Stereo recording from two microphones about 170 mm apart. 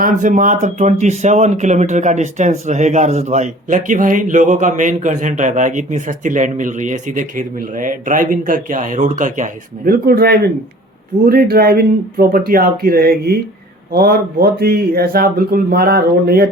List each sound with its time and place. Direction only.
0.0 s speech: 50° right (ahead or behind)